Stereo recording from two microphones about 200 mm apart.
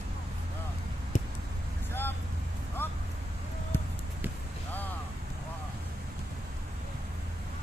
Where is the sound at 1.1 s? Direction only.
35° left (ahead or behind).